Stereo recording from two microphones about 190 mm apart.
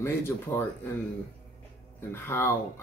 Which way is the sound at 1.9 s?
10° left (ahead or behind).